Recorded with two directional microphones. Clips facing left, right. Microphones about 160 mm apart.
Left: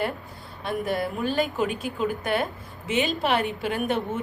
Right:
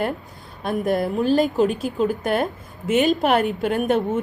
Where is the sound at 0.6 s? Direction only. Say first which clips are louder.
Right 5 dB; 45° right (ahead or behind).